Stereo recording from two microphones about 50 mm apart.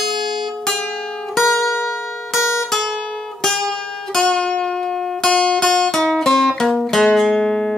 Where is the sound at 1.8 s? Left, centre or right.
Left.